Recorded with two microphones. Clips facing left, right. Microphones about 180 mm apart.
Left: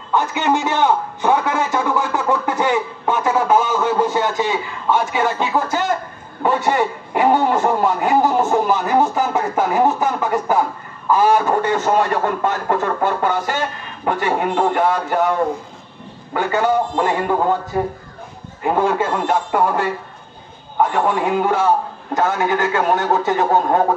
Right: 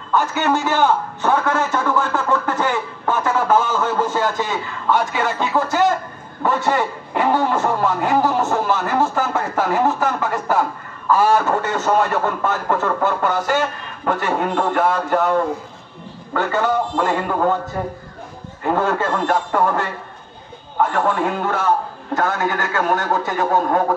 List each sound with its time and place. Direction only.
0.1 s a man's voice: 15° left (ahead or behind)
16.3 s a man's voice: 10° left (ahead or behind)
18.6 s a man's voice: 10° left (ahead or behind)
20.9 s a man's voice: 15° left (ahead or behind)